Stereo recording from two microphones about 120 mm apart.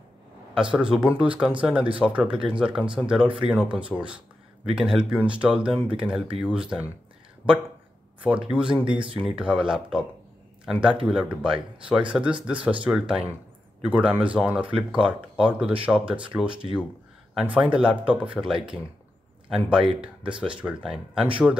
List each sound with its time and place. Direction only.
0.6 s speech: 5° right (ahead or behind)
7.4 s speech: 15° left (ahead or behind)
8.5 s a man's voice: 10° right (ahead or behind)